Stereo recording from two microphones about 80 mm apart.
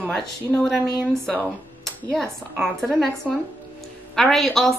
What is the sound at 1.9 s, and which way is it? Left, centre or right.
Dishes, centre.